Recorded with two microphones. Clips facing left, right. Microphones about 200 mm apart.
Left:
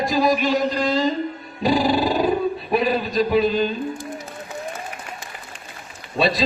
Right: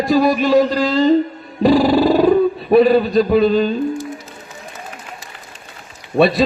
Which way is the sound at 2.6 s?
60° right (ahead or behind).